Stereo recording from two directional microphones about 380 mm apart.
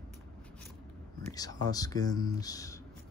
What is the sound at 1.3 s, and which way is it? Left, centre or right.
Speech, centre.